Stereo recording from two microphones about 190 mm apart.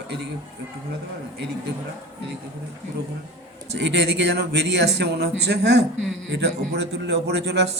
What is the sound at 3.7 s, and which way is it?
A man's voice, 65° right (ahead or behind).